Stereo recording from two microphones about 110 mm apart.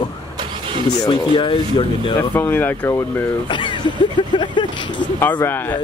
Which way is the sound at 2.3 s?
20° left (ahead or behind).